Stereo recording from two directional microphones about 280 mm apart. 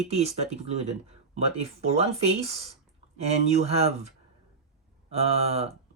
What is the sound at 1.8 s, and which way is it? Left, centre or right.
Speech, right.